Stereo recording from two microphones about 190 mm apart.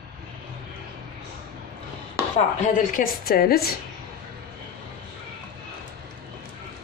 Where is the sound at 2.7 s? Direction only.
45° left (ahead or behind).